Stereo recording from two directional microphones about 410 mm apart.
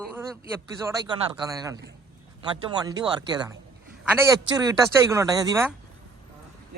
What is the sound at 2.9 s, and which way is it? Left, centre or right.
Speech, centre.